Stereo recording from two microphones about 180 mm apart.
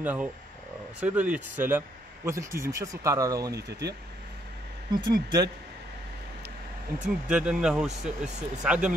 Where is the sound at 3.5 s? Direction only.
65° right (ahead or behind).